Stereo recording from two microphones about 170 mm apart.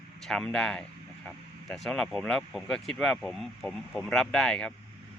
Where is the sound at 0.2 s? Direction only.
5° left (ahead or behind).